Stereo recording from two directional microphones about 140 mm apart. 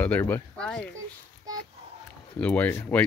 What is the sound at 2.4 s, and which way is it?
Speech, 10° left (ahead or behind).